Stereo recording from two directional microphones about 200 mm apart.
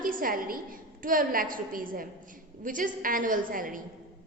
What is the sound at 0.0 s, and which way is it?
A woman's voice, 45° right (ahead or behind).